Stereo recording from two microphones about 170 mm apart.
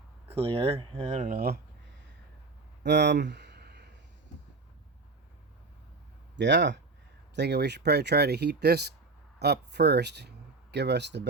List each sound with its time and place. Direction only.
0.3 s speech: 35° right (ahead or behind); by 1.5 s 55° right (ahead or behind)
2.8 s a sound: 90° right
6.3 s speech: 90° right